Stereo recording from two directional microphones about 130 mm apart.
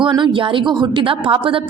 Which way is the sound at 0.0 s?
40° right (ahead or behind).